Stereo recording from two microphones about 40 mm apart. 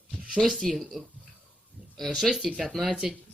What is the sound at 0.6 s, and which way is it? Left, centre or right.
Speech, centre.